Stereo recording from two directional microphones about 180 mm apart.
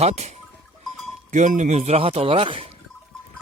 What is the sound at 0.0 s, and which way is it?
Speech, 40° right (ahead or behind).